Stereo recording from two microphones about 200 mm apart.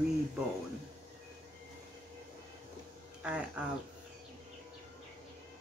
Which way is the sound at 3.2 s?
5° right (ahead or behind).